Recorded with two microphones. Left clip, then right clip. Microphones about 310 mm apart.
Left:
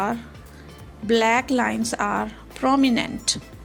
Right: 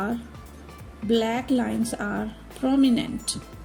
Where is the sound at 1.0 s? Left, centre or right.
Left.